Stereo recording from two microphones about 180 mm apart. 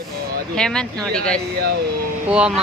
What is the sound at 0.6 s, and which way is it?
Speech, 5° left (ahead or behind).